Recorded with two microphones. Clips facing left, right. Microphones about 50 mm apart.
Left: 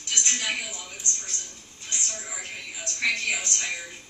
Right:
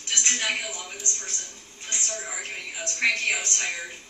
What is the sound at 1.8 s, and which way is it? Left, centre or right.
A woman's voice, right.